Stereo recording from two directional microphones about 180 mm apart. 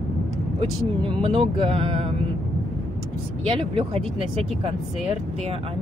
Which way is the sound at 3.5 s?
30° right (ahead or behind).